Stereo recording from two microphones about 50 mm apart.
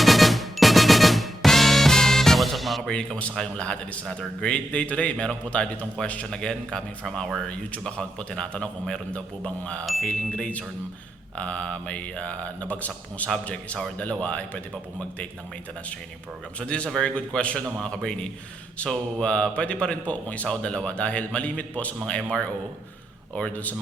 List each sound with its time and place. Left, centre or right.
0.0 s music: centre
2.9 s a man's voice: centre
9.8 s chime: centre
10.1 s a man's voice: centre
13.3 s a man's voice: centre
16.6 s a man's voice: left
23.5 s speech: left